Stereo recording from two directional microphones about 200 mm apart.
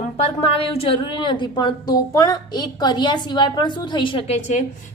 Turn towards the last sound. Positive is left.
turn(degrees=35)  # may be behind; listen again after turning